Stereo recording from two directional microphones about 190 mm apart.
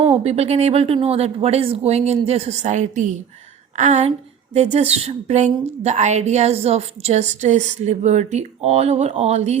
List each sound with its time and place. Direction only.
0.0 s a woman's voice: 30° right (ahead or behind)